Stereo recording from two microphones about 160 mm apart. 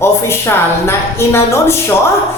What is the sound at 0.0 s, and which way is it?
Speech, 15° left (ahead or behind).